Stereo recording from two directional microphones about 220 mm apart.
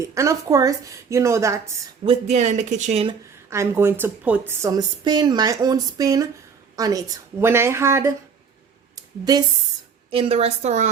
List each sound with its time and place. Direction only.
0.0 s a woman's voice: 15° right (ahead or behind)
2.2 s speech: 30° right (ahead or behind)
3.5 s a woman's voice: 10° right (ahead or behind)
9.0 s a sound: 15° right (ahead or behind)
10.1 s a woman's voice: 25° right (ahead or behind)